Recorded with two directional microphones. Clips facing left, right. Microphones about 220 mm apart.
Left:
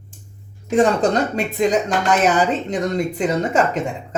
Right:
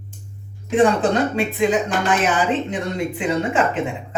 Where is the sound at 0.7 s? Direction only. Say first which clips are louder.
Even; 40° left (ahead or behind).